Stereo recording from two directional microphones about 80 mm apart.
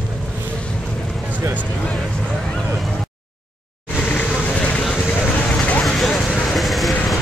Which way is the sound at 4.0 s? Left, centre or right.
Centre.